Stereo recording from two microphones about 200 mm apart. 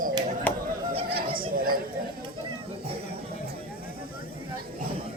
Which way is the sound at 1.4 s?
45° right (ahead or behind).